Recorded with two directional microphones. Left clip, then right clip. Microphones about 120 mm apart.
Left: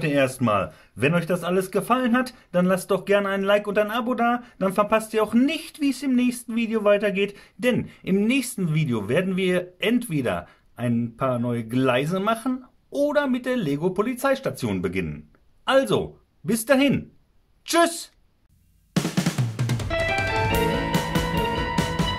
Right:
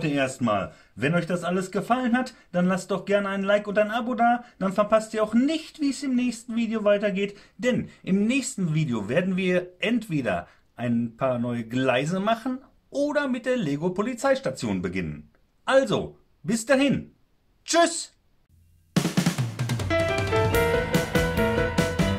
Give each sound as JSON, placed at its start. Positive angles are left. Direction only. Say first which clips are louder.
{"t": 0.0, "sound": "speech", "louder": "left 4 dB", "side_deg": 55}
{"t": 0.9, "sound": "a man's voice", "louder": "left 3 dB", "side_deg": 50}
{"t": 18.9, "sound": "music", "louder": "even", "side_deg": 0}